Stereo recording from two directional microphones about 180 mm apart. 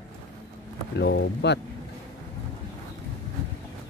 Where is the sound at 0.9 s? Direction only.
70° left (ahead or behind).